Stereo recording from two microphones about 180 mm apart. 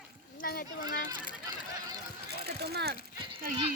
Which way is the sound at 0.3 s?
55° left (ahead or behind).